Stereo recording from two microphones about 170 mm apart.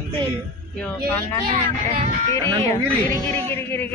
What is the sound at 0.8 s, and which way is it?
Speech, 10° left (ahead or behind).